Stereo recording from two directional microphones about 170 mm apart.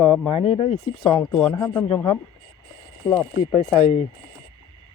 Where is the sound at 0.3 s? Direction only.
30° left (ahead or behind).